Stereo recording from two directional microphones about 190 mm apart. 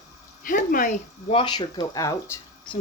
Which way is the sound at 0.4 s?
45° left (ahead or behind).